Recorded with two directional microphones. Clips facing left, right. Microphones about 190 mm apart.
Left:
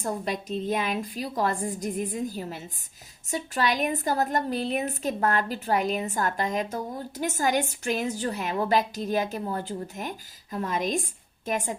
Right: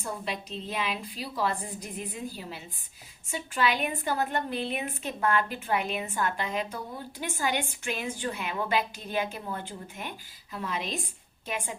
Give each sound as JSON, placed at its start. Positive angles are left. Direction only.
{"t": 0.0, "sound": "a woman's voice", "side_deg": 45}